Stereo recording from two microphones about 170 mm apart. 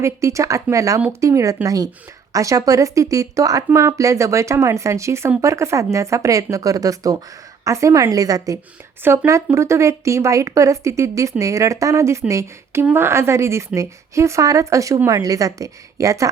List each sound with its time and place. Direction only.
0.0 s a woman's voice: 15° right (ahead or behind)